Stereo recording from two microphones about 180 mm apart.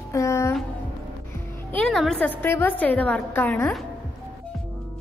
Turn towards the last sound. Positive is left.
turn(degrees=10)  # may be behind; listen again after turning